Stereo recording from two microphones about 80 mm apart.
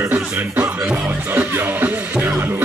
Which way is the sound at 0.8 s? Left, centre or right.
Right.